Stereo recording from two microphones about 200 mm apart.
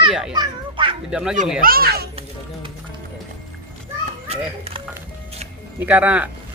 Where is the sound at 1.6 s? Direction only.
50° right (ahead or behind).